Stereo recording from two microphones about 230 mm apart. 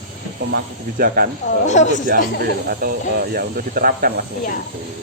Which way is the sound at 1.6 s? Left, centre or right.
Left.